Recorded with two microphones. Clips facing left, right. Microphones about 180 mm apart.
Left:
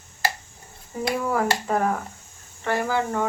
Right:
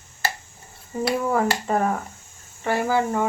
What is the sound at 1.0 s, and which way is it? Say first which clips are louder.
Speech: right 2 dB; 5° right (ahead or behind).